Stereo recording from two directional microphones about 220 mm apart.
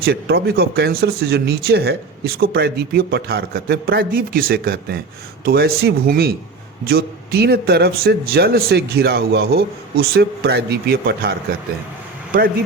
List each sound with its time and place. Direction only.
0.0 s speech: 45° right (ahead or behind)